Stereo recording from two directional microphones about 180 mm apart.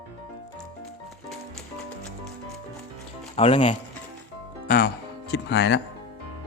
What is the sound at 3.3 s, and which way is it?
Speech, 35° left (ahead or behind).